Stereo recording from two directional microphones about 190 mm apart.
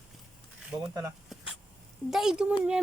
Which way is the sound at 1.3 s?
Centre (ahead or behind).